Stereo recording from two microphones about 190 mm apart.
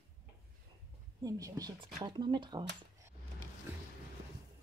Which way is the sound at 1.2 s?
20° right (ahead or behind).